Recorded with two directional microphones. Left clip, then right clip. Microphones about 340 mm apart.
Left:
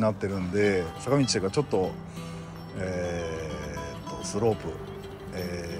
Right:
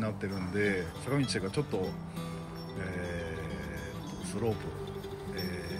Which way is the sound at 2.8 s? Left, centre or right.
Left.